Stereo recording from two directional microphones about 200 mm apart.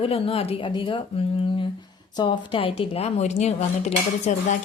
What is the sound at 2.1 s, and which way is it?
Speech, 25° left (ahead or behind).